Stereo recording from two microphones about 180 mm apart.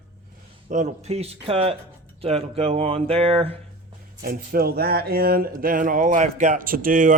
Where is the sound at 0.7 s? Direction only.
40° right (ahead or behind).